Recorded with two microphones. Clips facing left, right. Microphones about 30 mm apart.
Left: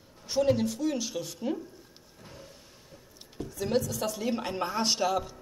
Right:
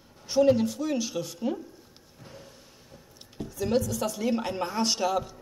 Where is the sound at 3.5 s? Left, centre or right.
Centre.